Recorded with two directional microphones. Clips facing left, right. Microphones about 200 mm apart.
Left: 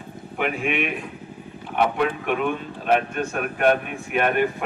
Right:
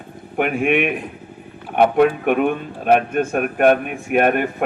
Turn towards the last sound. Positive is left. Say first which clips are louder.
# right 5 dB
turn(degrees=-50)  # may be behind; listen again after turning